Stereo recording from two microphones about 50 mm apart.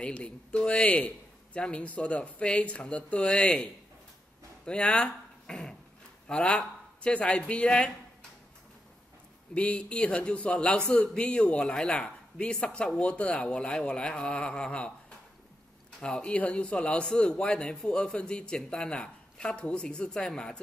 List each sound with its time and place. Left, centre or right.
0.0 s a man's voice: left
4.6 s a man's voice: left
9.5 s a man's voice: left